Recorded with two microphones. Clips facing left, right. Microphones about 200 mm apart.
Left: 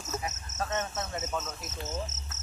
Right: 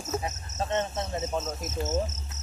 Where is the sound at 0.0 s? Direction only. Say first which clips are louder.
Right 4 dB; 35° right (ahead or behind).